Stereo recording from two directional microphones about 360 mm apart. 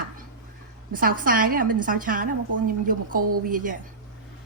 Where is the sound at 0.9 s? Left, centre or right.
Right.